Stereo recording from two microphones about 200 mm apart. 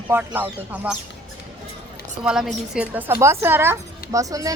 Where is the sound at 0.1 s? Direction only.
10° right (ahead or behind).